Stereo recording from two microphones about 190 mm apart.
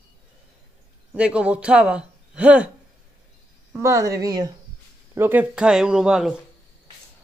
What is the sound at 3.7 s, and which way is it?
Speech, 15° right (ahead or behind).